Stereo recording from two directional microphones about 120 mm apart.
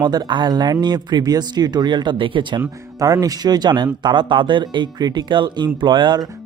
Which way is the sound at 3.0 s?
30° right (ahead or behind).